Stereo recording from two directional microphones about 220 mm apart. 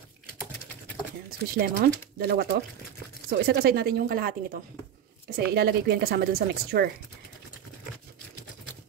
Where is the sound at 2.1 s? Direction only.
45° right (ahead or behind).